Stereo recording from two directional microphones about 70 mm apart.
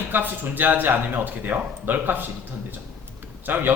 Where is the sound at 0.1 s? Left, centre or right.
Right.